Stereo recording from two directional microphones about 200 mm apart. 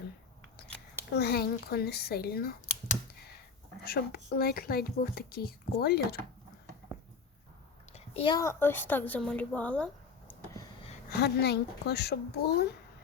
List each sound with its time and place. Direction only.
1.1 s speech: 50° left (ahead or behind)
3.8 s speech: 50° left (ahead or behind)
7.9 s a woman's voice: 25° left (ahead or behind); by 10.3 s 5° left (ahead or behind)
11.2 s a child's voice: 55° left (ahead or behind)